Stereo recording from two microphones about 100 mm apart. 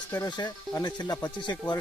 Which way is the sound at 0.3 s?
45° left (ahead or behind).